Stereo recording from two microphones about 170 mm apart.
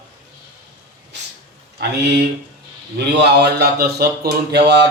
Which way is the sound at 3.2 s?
70° right (ahead or behind).